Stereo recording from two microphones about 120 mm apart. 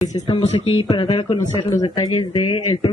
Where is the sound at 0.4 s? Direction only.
60° left (ahead or behind).